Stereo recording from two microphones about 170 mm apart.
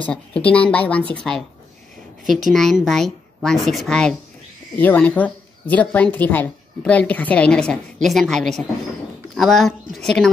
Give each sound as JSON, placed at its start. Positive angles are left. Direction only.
{"t": 0.0, "sound": "a woman's voice", "side_deg": 5}